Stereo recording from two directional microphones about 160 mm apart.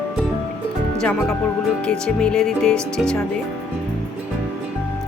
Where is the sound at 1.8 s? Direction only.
5° left (ahead or behind).